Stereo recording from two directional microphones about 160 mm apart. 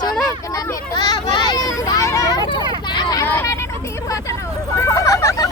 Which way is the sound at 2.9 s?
20° left (ahead or behind).